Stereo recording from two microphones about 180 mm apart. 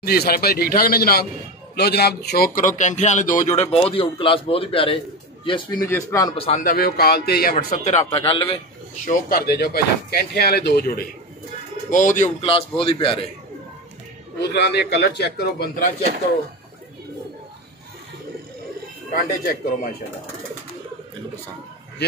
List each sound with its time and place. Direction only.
0.0 s a man's voice: 60° left (ahead or behind); by 3.6 s 45° left (ahead or behind)
3.7 s a man's voice: 30° left (ahead or behind)
5.9 s speech: 15° left (ahead or behind)
6.3 s a man's voice: 30° left (ahead or behind)
6.6 s a man's voice: 55° left (ahead or behind); by 8.5 s 30° left (ahead or behind)
9.0 s a man's voice: 60° left (ahead or behind)
11.9 s a man's voice: 45° left (ahead or behind)
12.4 s a man's voice: 30° left (ahead or behind)
14.4 s a man's voice: 65° left (ahead or behind)
19.1 s a man's voice: 55° left (ahead or behind)